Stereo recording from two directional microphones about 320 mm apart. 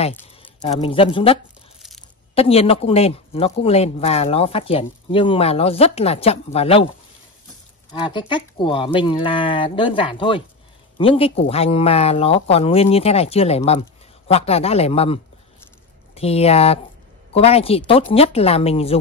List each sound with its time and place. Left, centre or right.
0.4 s speech: centre
7.9 s speech: centre
16.2 s speech: centre